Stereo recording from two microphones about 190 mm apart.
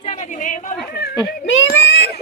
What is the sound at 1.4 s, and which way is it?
Speech, 65° left (ahead or behind).